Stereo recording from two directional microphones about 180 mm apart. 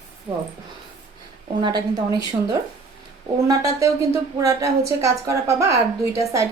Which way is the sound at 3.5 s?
20° right (ahead or behind).